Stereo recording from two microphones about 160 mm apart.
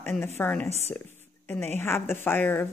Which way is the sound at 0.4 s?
5° left (ahead or behind).